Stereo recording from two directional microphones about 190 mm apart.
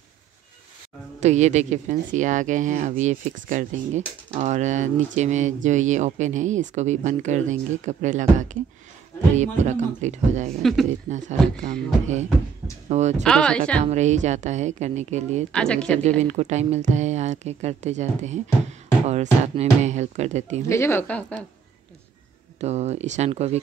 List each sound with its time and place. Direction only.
1.2 s speech: 40° right (ahead or behind)
12.8 s speech: 35° right (ahead or behind)
13.2 s speech: 5° left (ahead or behind)
13.8 s speech: 40° right (ahead or behind)
15.5 s speech: 5° left (ahead or behind)
16.2 s speech: 35° right (ahead or behind)
20.6 s speech: 15° left (ahead or behind)
22.6 s speech: 35° right (ahead or behind)